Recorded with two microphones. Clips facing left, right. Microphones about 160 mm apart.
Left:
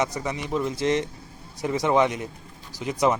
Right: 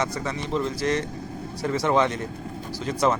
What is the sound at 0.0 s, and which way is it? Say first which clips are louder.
A man's voice: left 1 dB; 15° left (ahead or behind).